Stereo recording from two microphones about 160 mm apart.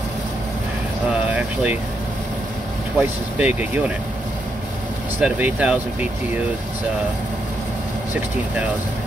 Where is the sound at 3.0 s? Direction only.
10° right (ahead or behind).